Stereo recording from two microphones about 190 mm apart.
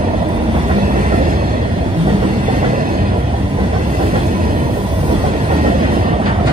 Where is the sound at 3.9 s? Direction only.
40° right (ahead or behind).